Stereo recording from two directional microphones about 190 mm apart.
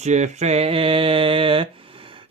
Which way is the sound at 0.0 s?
35° right (ahead or behind).